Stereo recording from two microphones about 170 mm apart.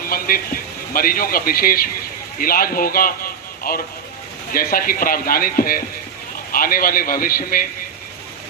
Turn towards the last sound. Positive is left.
turn(degrees=55)  # may be behind; listen again after turning